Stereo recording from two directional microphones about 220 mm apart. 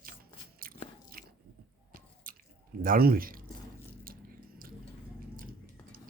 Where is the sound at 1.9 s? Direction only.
40° right (ahead or behind).